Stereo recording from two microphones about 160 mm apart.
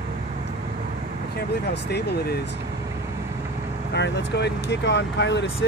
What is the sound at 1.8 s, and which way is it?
Speech, 90° left.